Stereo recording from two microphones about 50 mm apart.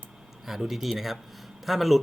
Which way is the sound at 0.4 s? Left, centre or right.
Centre.